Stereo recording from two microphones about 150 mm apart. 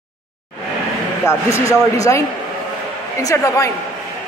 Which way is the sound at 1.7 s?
20° left (ahead or behind).